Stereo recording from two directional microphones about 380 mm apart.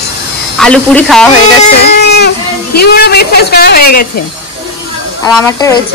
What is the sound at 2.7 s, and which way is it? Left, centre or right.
Speech, left.